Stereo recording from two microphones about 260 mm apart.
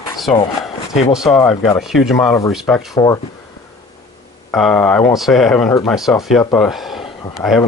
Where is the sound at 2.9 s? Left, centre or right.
Centre.